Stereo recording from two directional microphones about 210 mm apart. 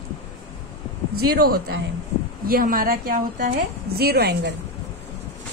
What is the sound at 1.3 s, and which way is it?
A woman's voice, 45° right (ahead or behind).